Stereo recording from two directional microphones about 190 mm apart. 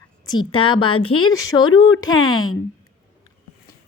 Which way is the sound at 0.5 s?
25° left (ahead or behind).